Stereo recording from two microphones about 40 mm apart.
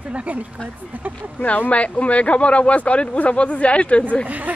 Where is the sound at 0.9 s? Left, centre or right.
Right.